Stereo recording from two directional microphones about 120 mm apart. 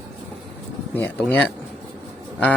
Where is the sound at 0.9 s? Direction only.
15° left (ahead or behind).